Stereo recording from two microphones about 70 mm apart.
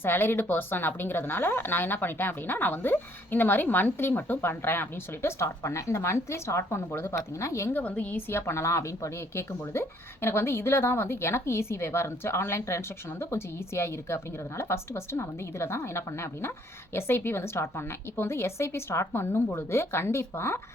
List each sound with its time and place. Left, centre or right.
0.0 s a woman's voice: left
7.7 s a woman's voice: left
8.3 s speech: left